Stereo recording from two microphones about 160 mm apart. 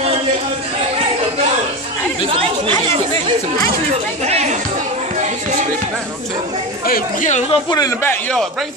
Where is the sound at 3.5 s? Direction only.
45° right (ahead or behind).